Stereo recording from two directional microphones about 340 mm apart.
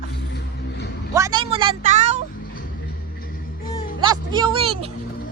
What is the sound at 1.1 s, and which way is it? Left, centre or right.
Speech, centre.